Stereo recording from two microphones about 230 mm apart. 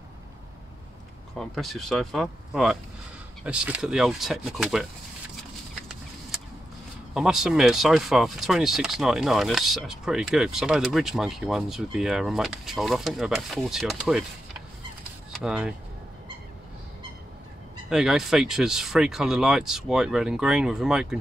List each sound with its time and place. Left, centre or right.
1.3 s speech: centre
7.2 s speech: centre
15.3 s speech: centre
17.8 s speech: centre